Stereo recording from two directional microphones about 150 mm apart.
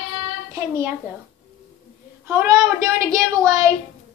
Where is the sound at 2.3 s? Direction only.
20° right (ahead or behind).